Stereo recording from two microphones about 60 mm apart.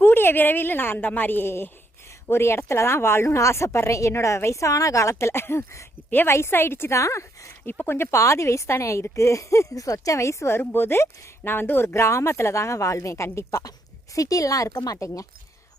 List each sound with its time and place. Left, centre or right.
0.0 s a woman's voice: left
6.9 s speech: left
7.6 s a woman's voice: left
13.5 s speech: left
14.9 s speech: left